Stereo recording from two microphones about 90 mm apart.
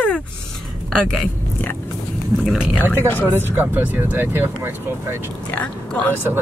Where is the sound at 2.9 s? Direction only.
20° left (ahead or behind).